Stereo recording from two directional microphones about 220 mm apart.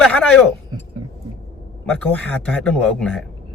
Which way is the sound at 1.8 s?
5° left (ahead or behind).